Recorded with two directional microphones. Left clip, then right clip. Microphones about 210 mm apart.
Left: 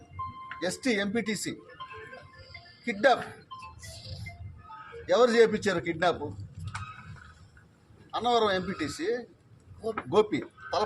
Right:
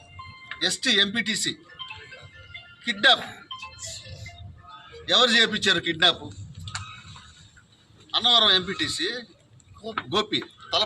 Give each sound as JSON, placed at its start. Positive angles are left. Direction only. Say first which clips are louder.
{"t": 0.8, "sound": "a man's voice", "louder": "right 8 dB", "side_deg": 5}
{"t": 2.8, "sound": "a man's voice", "louder": "right 4 dB", "side_deg": 5}
{"t": 5.0, "sound": "a man's voice", "louder": "right 2 dB", "side_deg": 5}
{"t": 8.1, "sound": "a man's voice", "louder": "right 7 dB", "side_deg": 5}